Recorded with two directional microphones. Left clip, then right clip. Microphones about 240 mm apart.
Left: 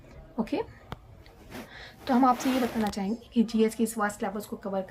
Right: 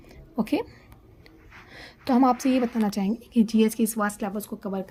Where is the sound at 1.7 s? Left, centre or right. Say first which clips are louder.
Right 3 dB; right.